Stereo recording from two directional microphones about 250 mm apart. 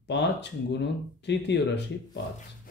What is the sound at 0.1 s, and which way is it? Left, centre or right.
Speech, left.